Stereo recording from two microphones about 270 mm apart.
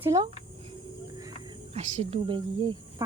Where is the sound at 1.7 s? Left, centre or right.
Right.